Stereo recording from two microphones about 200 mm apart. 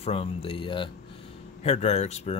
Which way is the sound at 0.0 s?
30° left (ahead or behind).